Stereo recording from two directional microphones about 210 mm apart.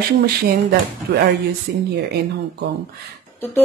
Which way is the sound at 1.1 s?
50° right (ahead or behind).